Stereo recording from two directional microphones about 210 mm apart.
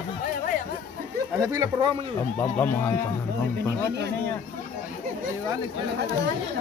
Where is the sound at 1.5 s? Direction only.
20° right (ahead or behind).